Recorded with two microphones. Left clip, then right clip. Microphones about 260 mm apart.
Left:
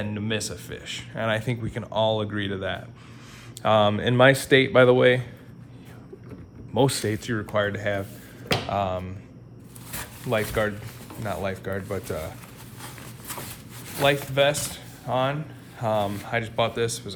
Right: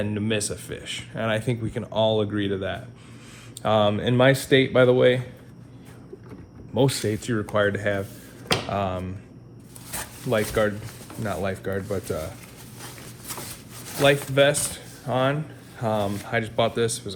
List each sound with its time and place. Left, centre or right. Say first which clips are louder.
0.0 s speech: right 3 dB; left
6.7 s speech: even; left
10.5 s speech: right 2 dB; left
14.3 s speech: right 2 dB; left